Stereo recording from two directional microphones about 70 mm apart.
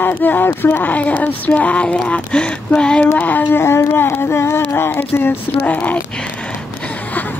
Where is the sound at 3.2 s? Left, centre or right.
Left.